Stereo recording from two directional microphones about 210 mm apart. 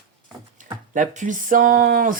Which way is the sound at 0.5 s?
35° right (ahead or behind).